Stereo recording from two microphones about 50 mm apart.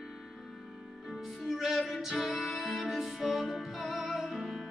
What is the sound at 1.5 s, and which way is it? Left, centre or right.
Music, centre.